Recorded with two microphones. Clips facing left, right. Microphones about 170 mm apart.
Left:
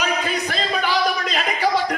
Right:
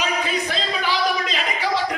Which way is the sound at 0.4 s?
50° left (ahead or behind).